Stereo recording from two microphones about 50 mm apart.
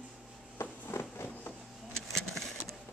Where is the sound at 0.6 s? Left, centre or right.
Left.